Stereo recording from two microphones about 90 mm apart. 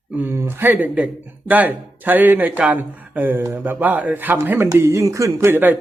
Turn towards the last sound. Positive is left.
turn(degrees=-25)  # may be behind; listen again after turning